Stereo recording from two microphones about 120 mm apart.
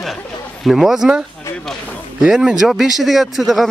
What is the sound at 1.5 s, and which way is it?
Speech, 10° left (ahead or behind).